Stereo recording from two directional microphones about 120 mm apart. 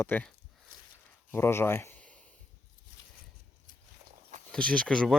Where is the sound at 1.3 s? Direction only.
20° left (ahead or behind).